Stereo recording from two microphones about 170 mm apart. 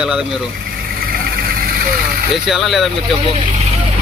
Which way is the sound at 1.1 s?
60° right (ahead or behind).